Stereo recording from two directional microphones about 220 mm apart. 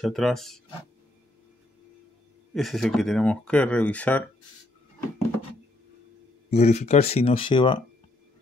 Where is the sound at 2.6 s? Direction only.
Centre (ahead or behind).